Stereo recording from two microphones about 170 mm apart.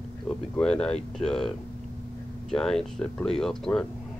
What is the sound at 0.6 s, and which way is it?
Speech, 5° left (ahead or behind).